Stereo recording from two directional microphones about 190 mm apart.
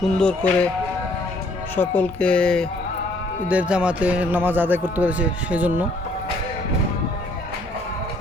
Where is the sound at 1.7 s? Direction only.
10° left (ahead or behind).